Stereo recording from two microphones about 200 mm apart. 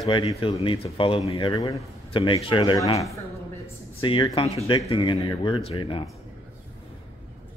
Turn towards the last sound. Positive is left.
turn(degrees=25)  # may be behind; listen again after turning